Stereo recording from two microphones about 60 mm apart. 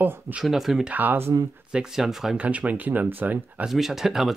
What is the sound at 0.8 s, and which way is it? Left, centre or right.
Speech, right.